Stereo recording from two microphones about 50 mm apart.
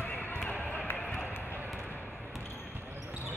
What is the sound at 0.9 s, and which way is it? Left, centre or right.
Run, left.